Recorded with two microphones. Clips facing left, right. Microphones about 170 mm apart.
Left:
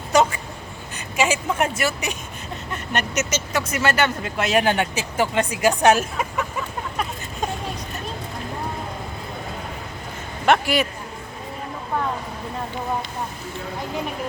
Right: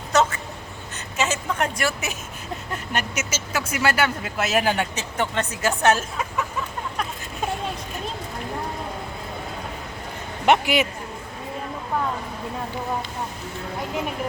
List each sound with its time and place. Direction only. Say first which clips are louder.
0.1 s duck: left 2 dB; 10° left (ahead or behind)
0.9 s a woman's voice: left 4 dB; 10° left (ahead or behind)
10.4 s a man's voice: even; 20° right (ahead or behind)